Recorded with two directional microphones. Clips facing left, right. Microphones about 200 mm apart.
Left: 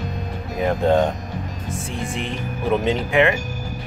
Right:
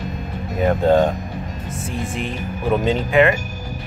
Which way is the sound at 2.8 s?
15° left (ahead or behind).